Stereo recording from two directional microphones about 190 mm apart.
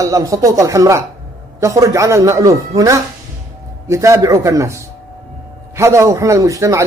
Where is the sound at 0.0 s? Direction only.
15° right (ahead or behind).